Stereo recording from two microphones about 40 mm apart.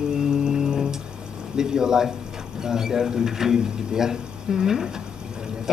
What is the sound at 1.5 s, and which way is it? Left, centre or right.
Speech, centre.